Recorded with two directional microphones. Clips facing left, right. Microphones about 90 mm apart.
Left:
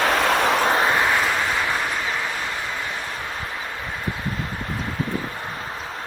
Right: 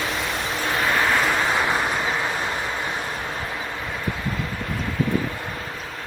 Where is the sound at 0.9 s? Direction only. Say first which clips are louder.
Even; 5° left (ahead or behind).